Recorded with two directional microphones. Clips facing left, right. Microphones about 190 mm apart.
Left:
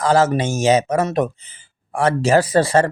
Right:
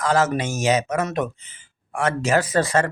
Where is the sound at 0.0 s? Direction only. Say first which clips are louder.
Left 4 dB; 30° left (ahead or behind).